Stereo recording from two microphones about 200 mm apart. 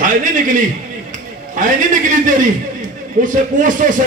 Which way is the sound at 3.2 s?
40° right (ahead or behind).